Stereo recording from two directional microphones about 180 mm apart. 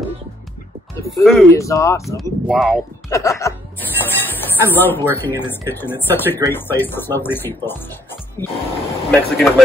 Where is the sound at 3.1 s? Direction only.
15° left (ahead or behind).